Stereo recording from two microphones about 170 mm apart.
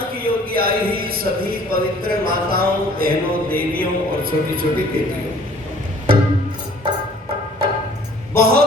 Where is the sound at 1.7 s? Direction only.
60° right (ahead or behind).